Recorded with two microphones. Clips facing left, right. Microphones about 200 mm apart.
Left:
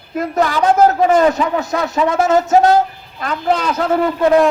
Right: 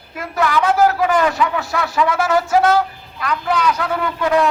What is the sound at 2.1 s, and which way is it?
Speech, 20° left (ahead or behind).